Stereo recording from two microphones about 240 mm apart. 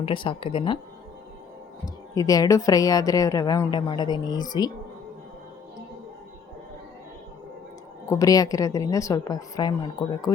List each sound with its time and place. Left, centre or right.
0.0 s speech: left
2.1 s a woman's voice: centre
8.1 s a woman's voice: centre